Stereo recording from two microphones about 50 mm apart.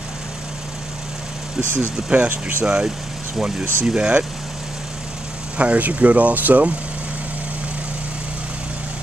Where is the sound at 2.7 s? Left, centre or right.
Centre.